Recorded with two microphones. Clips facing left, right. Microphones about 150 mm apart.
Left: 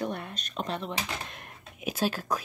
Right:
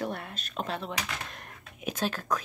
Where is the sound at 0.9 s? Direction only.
25° left (ahead or behind).